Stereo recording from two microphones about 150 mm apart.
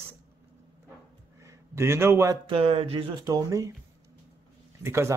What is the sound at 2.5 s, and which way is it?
Speech, 40° right (ahead or behind).